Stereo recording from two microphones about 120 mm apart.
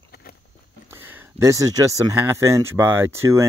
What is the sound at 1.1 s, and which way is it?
Speech, 20° right (ahead or behind).